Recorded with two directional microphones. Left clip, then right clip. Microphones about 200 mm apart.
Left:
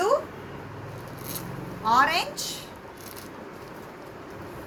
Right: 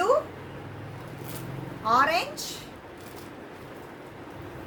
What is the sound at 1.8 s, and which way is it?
Speech, 15° right (ahead or behind).